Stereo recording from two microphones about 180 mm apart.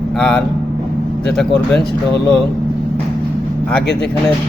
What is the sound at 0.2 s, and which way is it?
Speech, 5° left (ahead or behind).